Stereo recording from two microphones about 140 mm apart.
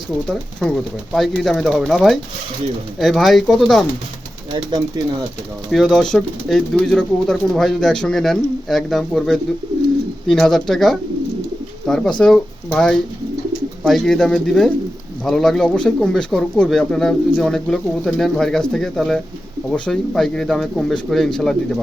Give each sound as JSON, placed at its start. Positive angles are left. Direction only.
{"t": 0.6, "sound": "speech", "side_deg": 0}
{"t": 4.5, "sound": "speech", "side_deg": -30}
{"t": 5.7, "sound": "speech", "side_deg": 5}